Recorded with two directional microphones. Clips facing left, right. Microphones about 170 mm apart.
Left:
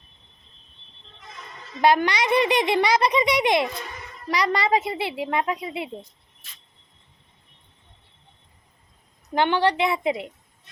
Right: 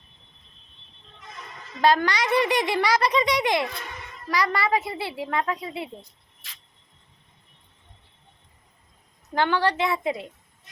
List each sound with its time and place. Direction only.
1.8 s a child's voice: 15° left (ahead or behind)
6.4 s cricket: 90° right
9.3 s a child's voice: 20° left (ahead or behind)